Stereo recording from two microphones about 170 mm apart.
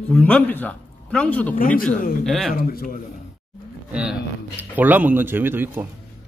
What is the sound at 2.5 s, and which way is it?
Speech, 60° left (ahead or behind).